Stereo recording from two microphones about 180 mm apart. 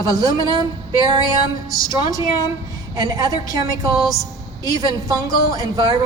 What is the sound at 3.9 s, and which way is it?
Speech, centre (ahead or behind).